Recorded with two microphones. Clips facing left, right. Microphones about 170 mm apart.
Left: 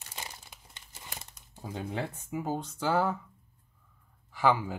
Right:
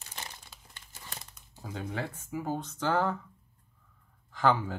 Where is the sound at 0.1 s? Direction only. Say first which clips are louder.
Left 1 dB; 15° left (ahead or behind).